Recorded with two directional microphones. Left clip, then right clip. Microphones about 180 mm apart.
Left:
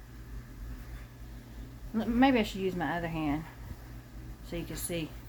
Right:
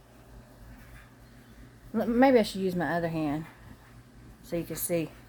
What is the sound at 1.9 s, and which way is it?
Speech, 50° right (ahead or behind).